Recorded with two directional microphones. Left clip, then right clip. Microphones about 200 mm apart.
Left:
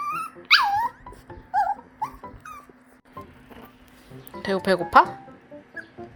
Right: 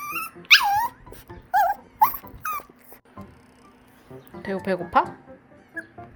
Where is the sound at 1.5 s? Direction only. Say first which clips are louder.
Right 3 dB; 35° right (ahead or behind).